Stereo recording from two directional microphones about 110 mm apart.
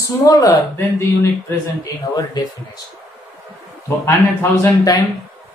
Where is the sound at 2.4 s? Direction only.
40° left (ahead or behind).